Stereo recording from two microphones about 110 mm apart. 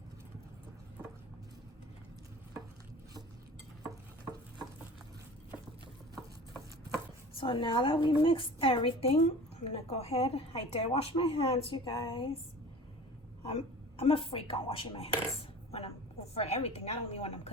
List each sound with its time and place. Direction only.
7.3 s a woman's voice: 50° left (ahead or behind)
14.0 s a woman's voice: 60° left (ahead or behind)
15.7 s a woman's voice: 70° left (ahead or behind)